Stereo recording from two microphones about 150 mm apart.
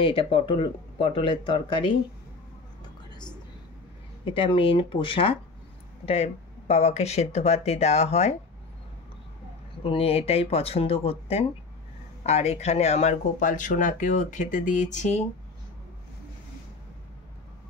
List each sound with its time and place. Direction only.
0.0 s speech: 40° left (ahead or behind)
4.2 s speech: 35° left (ahead or behind)
9.8 s speech: 40° left (ahead or behind)